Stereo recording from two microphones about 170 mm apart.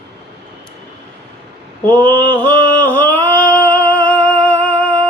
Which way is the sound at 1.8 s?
10° left (ahead or behind).